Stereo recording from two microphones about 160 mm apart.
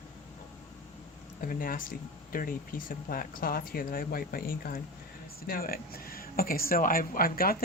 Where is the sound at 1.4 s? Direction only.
60° left (ahead or behind).